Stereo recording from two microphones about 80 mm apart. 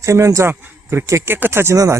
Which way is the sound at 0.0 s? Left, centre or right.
Right.